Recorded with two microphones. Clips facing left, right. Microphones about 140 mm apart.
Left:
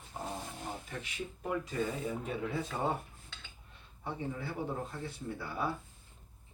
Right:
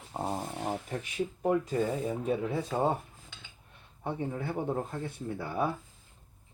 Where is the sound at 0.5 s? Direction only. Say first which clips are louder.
Right 8 dB; 80° right.